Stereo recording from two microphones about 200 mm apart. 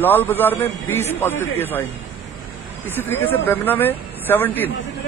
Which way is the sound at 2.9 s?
10° left (ahead or behind).